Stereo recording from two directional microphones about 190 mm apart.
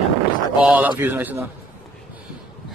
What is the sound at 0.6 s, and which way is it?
Speech, 5° right (ahead or behind).